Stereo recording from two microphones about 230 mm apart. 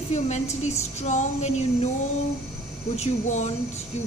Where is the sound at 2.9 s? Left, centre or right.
Left.